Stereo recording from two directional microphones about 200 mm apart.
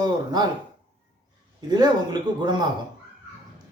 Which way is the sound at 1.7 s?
20° right (ahead or behind).